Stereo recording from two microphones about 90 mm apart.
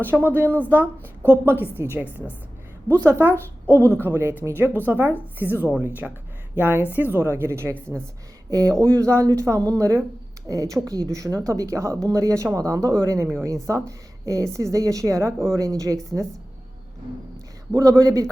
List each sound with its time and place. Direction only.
0.0 s a woman's voice: 25° right (ahead or behind)
3.8 s speech: 20° left (ahead or behind)
4.0 s a woman's voice: 25° right (ahead or behind)
8.4 s a woman's voice: 40° right (ahead or behind)
17.7 s a woman's voice: 40° right (ahead or behind)